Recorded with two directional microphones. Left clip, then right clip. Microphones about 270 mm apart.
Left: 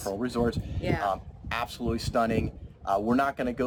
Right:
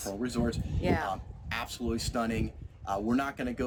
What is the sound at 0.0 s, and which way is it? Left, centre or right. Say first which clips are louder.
Speech: left 5 dB; centre.